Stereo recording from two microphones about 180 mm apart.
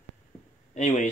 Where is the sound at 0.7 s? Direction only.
40° left (ahead or behind).